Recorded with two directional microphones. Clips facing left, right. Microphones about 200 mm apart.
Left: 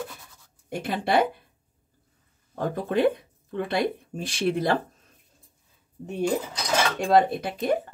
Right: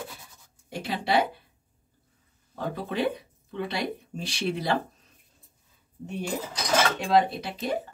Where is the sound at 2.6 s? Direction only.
50° left (ahead or behind).